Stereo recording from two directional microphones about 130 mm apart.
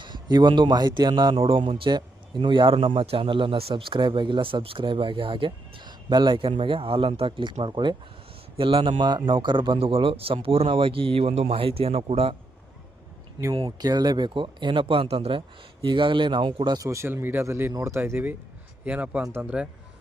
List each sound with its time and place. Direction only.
0.0 s a man's voice: 35° right (ahead or behind)
13.7 s speech: 30° right (ahead or behind); by 19.6 s 10° right (ahead or behind)